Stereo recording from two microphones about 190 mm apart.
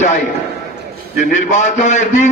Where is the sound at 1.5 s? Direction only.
40° left (ahead or behind).